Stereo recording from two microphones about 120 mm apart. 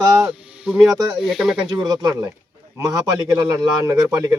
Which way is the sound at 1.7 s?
35° right (ahead or behind).